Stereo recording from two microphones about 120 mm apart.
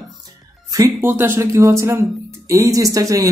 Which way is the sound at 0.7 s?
30° right (ahead or behind).